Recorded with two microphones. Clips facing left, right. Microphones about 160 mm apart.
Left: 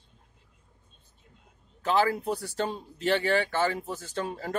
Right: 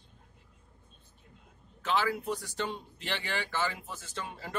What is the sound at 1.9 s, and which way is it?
Speech, 40° left (ahead or behind).